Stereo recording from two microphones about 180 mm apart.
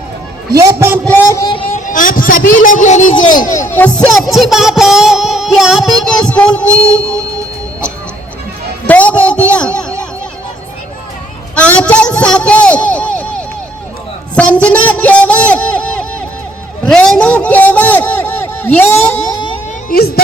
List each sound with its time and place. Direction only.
0.6 s a man's voice: 15° right (ahead or behind)
1.0 s a sound: 15° left (ahead or behind)
1.9 s a man's voice: 50° left (ahead or behind)
3.7 s music: 10° left (ahead or behind)
8.9 s a man's voice: 10° left (ahead or behind)
9.5 s a sound: 5° left (ahead or behind)
11.5 s a man's voice: 5° left (ahead or behind)
14.3 s a sound: 5° left (ahead or behind)
19.9 s speech: 60° left (ahead or behind)